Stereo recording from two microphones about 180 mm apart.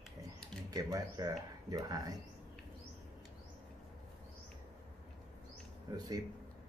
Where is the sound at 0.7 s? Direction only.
20° right (ahead or behind).